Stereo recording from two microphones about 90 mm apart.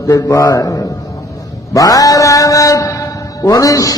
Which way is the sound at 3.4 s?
40° left (ahead or behind).